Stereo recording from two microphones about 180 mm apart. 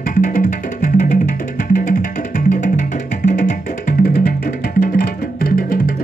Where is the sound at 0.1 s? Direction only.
50° left (ahead or behind).